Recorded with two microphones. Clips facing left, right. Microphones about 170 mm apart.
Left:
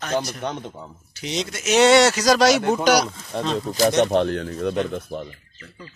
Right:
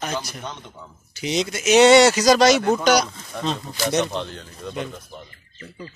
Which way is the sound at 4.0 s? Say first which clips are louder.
Left 7 dB; 60° left (ahead or behind).